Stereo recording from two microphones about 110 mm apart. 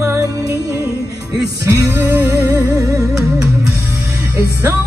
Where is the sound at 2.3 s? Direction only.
30° right (ahead or behind).